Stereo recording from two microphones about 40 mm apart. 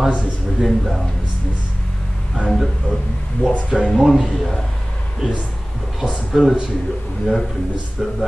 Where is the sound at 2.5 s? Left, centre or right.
Centre.